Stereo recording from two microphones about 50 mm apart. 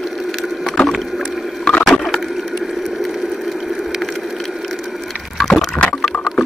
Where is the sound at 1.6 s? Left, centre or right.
Centre.